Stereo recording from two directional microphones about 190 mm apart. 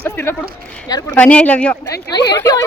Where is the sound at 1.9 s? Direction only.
20° left (ahead or behind).